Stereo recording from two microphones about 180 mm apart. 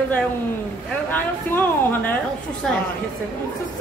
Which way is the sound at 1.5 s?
10° left (ahead or behind).